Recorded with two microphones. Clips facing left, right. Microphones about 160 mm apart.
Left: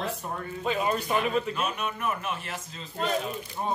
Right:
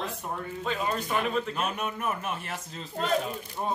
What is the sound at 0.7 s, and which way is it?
Speech, 10° left (ahead or behind).